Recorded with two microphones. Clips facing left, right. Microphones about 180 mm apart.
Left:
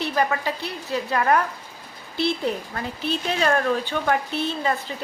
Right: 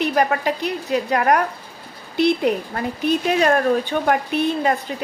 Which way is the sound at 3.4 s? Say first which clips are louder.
Right 1 dB; 45° right (ahead or behind).